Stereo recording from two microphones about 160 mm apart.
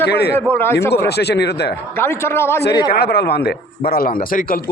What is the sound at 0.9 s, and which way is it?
Speech, 90° left.